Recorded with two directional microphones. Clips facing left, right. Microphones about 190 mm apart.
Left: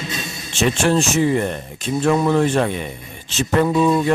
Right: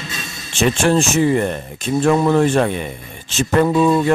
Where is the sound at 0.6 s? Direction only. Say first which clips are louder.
Right 2 dB; 50° right (ahead or behind).